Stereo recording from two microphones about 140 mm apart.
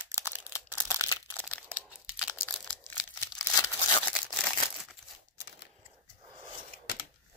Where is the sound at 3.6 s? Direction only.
30° left (ahead or behind).